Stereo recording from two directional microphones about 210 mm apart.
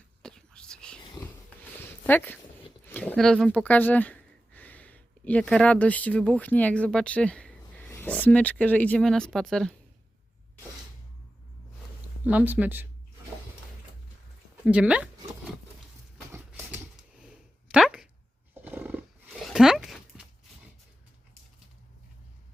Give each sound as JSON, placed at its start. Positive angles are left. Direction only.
{"t": 0.2, "sound": "whispering", "side_deg": 5}
{"t": 2.0, "sound": "speech", "side_deg": 10}
{"t": 12.2, "sound": "speech", "side_deg": -5}
{"t": 14.6, "sound": "speech", "side_deg": -5}
{"t": 16.3, "sound": "a sound", "side_deg": -10}
{"t": 18.5, "sound": "roar", "side_deg": -10}